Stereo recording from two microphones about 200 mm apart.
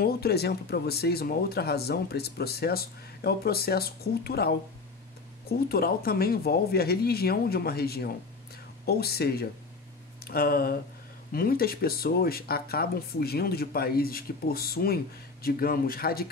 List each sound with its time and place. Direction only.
0.0 s speech: 50° left (ahead or behind)